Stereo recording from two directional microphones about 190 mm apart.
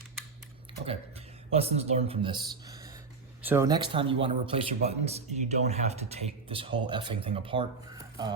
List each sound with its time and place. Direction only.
0.9 s speech: 30° right (ahead or behind)